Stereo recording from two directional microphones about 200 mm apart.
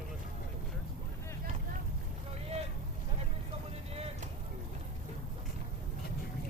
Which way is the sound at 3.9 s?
30° right (ahead or behind).